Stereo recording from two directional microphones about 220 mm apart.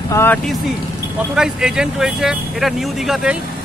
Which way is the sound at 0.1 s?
10° left (ahead or behind).